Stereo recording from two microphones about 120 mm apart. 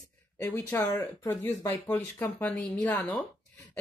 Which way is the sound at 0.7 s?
30° left (ahead or behind).